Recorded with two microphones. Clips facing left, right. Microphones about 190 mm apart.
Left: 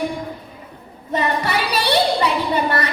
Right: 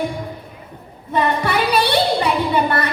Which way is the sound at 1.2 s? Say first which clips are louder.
Right 3 dB; 55° right (ahead or behind).